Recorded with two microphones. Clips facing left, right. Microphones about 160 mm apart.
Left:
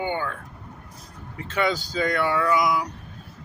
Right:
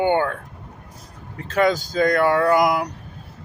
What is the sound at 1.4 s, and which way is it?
Speech, 40° right (ahead or behind).